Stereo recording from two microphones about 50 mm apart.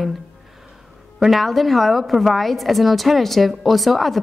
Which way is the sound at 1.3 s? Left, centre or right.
Centre.